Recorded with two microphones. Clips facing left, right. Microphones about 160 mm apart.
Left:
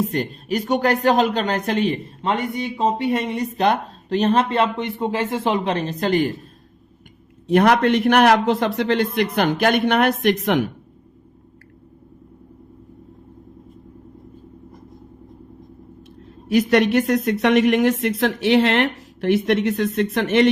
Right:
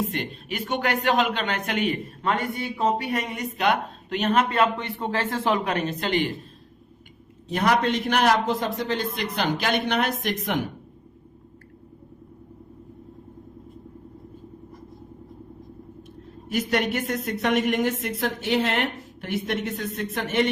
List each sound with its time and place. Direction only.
0.0 s speech: 40° left (ahead or behind)
7.4 s a man's voice: 60° left (ahead or behind)
16.5 s speech: 90° left